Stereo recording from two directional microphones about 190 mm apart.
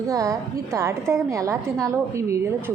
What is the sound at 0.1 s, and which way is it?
A woman's voice, 15° right (ahead or behind).